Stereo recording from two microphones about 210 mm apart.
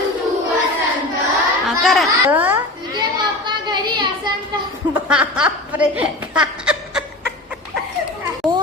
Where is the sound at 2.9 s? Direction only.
20° right (ahead or behind).